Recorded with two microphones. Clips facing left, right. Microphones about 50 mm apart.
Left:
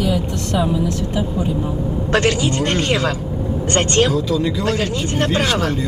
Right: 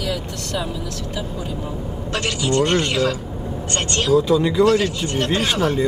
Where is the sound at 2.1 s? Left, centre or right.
Left.